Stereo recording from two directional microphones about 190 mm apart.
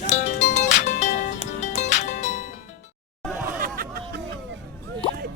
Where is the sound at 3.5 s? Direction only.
50° right (ahead or behind).